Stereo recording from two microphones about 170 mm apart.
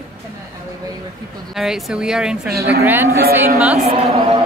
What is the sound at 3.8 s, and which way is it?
Speech, 35° right (ahead or behind).